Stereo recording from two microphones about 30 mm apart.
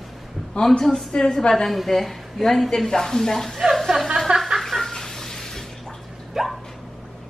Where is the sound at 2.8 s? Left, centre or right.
Centre.